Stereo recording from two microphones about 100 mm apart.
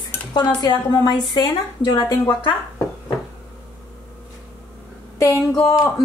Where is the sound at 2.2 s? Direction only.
50° left (ahead or behind).